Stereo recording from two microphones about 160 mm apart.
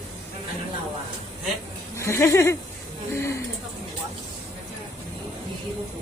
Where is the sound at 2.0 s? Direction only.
15° left (ahead or behind).